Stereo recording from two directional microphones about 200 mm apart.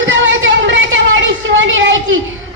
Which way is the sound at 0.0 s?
70° right (ahead or behind).